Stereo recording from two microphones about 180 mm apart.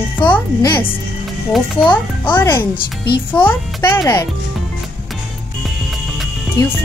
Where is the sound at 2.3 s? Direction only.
10° left (ahead or behind).